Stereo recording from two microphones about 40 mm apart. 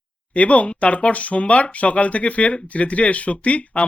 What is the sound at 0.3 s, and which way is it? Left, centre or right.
Speech, left.